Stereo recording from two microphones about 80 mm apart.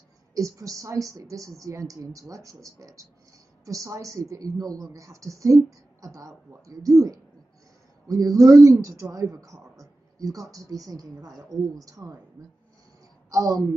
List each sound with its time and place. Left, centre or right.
0.3 s speech: right
13.3 s speech: right